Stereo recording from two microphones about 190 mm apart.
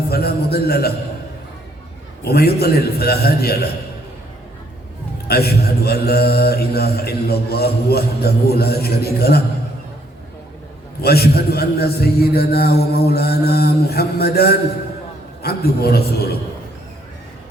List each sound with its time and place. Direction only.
0.1 s speech: 55° left (ahead or behind)
2.2 s speech: 55° left (ahead or behind)
5.3 s speech: 55° left (ahead or behind)
11.0 s speech: 55° left (ahead or behind)